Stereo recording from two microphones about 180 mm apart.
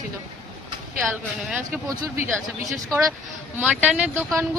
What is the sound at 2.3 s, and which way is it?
Speech, centre (ahead or behind).